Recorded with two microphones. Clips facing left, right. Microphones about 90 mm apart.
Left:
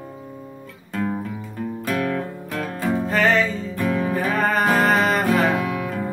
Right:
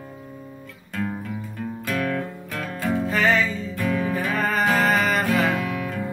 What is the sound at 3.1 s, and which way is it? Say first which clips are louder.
Music: left 2 dB; 50° left (ahead or behind).